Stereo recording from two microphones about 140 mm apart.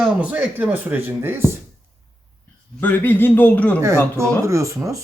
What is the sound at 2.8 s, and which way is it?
Speech, 15° left (ahead or behind).